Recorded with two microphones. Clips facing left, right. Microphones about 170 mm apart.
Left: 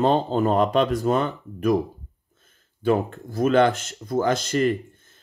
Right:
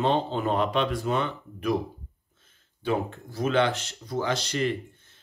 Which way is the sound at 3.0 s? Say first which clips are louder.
Left 7 dB; 50° left (ahead or behind).